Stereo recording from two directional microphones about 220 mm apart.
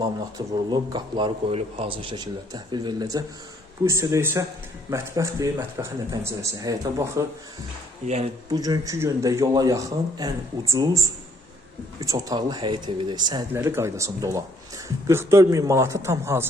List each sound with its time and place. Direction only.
0.0 s a man's voice: 20° right (ahead or behind)
8.0 s speech: 30° right (ahead or behind)
8.4 s a man's voice: 15° right (ahead or behind)